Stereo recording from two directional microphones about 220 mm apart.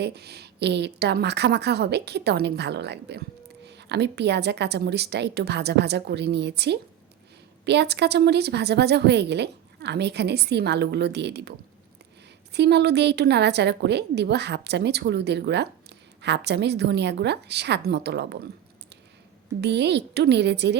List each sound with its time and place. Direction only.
0.0 s a woman's voice: 50° right (ahead or behind)
12.5 s a woman's voice: 50° right (ahead or behind)
19.6 s a woman's voice: 50° right (ahead or behind)